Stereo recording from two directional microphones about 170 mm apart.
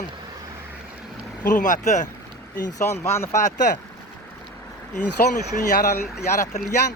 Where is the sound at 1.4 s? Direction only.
50° left (ahead or behind).